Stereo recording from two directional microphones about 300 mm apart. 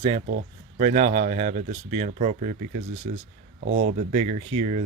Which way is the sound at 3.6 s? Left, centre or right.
Right.